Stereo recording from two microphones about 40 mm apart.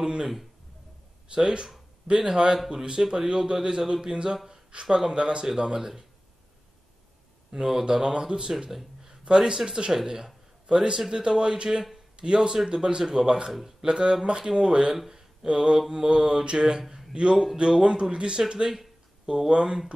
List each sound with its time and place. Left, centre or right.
0.0 s speech: centre
1.3 s speech: right
4.5 s a sound: right
4.9 s speech: right
7.5 s speech: centre
10.7 s speech: right
13.5 s speech: centre
13.8 s speech: right
15.1 s a sound: centre
15.9 s speech: centre